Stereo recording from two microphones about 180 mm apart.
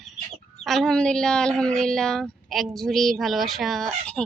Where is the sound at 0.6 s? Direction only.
Centre (ahead or behind).